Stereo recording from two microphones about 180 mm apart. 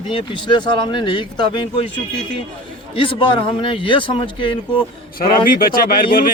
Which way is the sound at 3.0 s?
30° left (ahead or behind).